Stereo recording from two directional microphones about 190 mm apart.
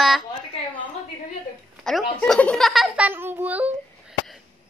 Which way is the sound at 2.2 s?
5° left (ahead or behind).